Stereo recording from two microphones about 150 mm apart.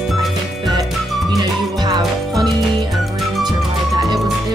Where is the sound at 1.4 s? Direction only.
25° right (ahead or behind).